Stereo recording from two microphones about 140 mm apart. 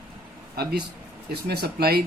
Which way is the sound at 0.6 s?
90° right.